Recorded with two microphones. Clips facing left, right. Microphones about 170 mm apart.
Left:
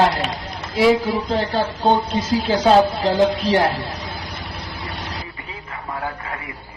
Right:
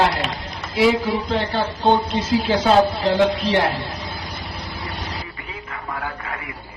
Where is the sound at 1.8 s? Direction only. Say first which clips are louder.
Right 1 dB; centre (ahead or behind).